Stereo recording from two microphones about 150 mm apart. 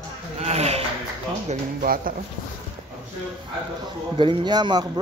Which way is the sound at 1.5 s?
65° right (ahead or behind).